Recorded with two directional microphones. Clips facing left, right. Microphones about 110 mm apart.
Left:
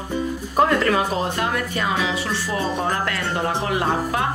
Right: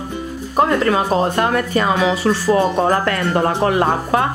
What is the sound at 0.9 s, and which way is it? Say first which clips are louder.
Speech: right 4 dB; 35° right (ahead or behind).